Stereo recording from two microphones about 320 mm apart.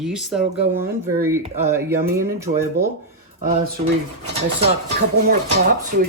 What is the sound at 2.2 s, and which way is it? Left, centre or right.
Speech, right.